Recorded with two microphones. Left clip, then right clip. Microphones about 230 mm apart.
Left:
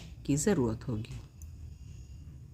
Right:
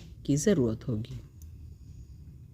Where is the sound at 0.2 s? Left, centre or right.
Centre.